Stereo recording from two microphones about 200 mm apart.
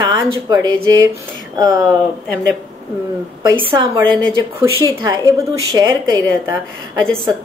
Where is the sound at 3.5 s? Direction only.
25° right (ahead or behind).